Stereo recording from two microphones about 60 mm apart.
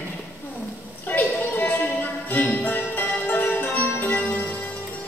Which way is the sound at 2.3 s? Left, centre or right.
Left.